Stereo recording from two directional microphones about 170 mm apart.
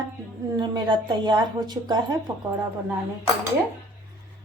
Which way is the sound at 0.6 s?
25° right (ahead or behind).